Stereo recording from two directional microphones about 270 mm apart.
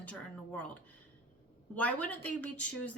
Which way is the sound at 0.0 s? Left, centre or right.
Centre.